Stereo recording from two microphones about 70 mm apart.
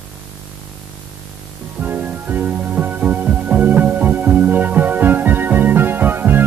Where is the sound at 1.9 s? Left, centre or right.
Right.